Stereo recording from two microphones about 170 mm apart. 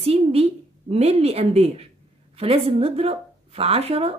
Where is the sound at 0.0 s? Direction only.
35° right (ahead or behind).